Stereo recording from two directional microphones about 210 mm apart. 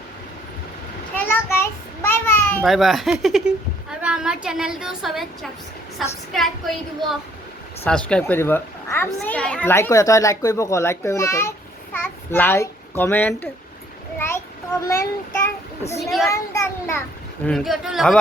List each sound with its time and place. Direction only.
1.1 s a sound: 10° left (ahead or behind)
2.6 s a woman's voice: centre (ahead or behind)
7.9 s a child's voice: 5° left (ahead or behind)
14.2 s child singing: 10° left (ahead or behind)
15.8 s a child's voice: 30° left (ahead or behind)
16.0 s a woman's voice: centre (ahead or behind)
16.3 s a child's voice: 15° left (ahead or behind)
17.4 s a woman's voice: centre (ahead or behind)